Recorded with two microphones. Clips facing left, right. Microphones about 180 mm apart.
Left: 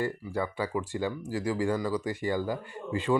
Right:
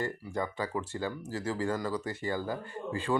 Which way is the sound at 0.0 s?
10° left (ahead or behind).